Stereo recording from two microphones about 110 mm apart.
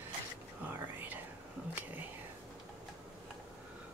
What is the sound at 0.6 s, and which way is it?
Speech, 15° right (ahead or behind).